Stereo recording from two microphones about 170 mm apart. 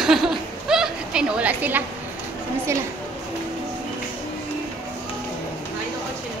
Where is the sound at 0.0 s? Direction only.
Centre (ahead or behind).